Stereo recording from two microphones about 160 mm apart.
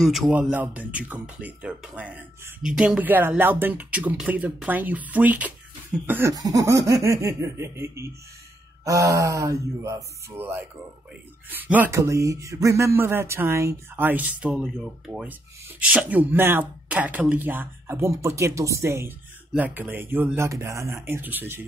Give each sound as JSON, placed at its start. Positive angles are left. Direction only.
{"t": 0.0, "sound": "speech", "side_deg": 0}